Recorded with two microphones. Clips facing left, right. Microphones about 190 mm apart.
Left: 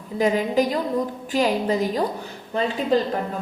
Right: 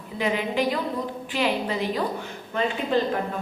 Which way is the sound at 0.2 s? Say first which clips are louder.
Left 5 dB; 40° left (ahead or behind).